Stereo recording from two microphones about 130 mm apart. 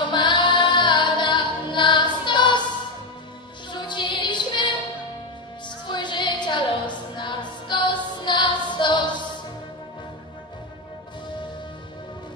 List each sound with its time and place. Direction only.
0.0 s music: 35° left (ahead or behind)
3.7 s music: 35° left (ahead or behind)
5.9 s music: 35° left (ahead or behind)